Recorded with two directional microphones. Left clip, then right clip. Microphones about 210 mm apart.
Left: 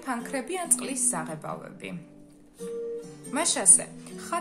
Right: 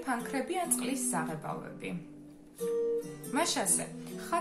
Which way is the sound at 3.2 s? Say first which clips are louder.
Left 6 dB; 50° left (ahead or behind).